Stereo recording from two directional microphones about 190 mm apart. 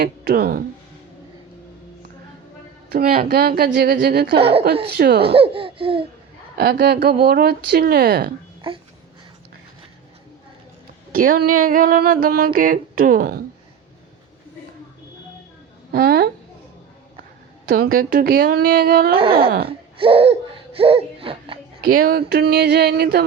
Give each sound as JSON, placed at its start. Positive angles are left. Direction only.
{"t": 0.0, "sound": "speech", "side_deg": -55}
{"t": 2.9, "sound": "speech", "side_deg": -50}
{"t": 4.4, "sound": "a woman's voice", "side_deg": -30}
{"t": 4.9, "sound": "speech", "side_deg": -55}
{"t": 5.3, "sound": "laughter", "side_deg": -30}
{"t": 6.6, "sound": "speech", "side_deg": -55}
{"t": 8.7, "sound": "speech", "side_deg": -30}
{"t": 11.1, "sound": "speech", "side_deg": -45}
{"t": 15.9, "sound": "a woman's voice", "side_deg": -55}
{"t": 17.9, "sound": "speech", "side_deg": -50}
{"t": 19.1, "sound": "speech", "side_deg": -30}
{"t": 21.8, "sound": "speech", "side_deg": -50}